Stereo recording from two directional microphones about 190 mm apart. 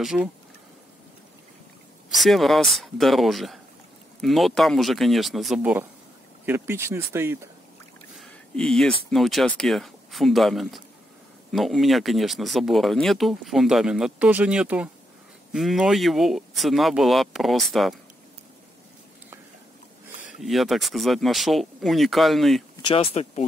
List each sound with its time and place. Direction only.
0.0 s speech: centre (ahead or behind)
2.1 s speech: centre (ahead or behind)
8.2 s a sound: centre (ahead or behind)
9.1 s speech: centre (ahead or behind)
20.4 s speech: centre (ahead or behind)
22.8 s speech: 25° left (ahead or behind)